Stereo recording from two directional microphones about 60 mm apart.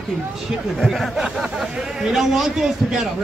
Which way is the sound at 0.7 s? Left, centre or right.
Centre.